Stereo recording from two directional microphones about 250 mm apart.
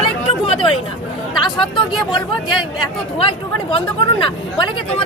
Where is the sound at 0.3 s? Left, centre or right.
Left.